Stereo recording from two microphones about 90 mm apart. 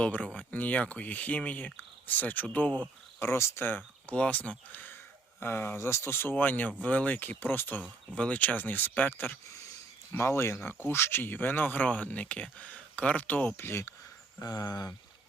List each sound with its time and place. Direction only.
0.0 s speech: 15° left (ahead or behind)
3.2 s speech: 30° left (ahead or behind)
10.1 s speech: 30° left (ahead or behind)
13.6 s speech: 30° left (ahead or behind)
14.4 s speech: 45° left (ahead or behind)